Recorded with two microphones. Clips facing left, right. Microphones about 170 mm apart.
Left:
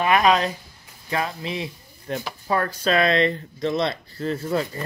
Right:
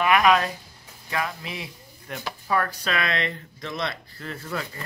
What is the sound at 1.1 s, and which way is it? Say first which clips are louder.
Speech: left 4 dB; 30° left (ahead or behind).